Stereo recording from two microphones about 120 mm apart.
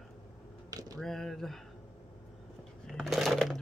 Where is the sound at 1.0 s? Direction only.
Centre (ahead or behind).